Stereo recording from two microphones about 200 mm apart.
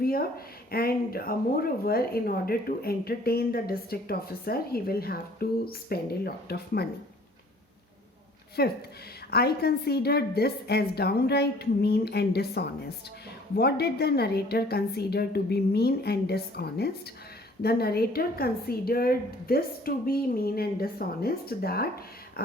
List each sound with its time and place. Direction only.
0.0 s speech: 50° left (ahead or behind)
8.6 s speech: 50° left (ahead or behind)